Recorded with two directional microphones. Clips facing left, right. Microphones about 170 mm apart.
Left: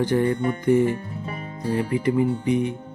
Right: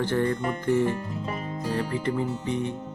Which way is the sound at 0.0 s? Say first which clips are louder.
Left 4 dB; 15° left (ahead or behind).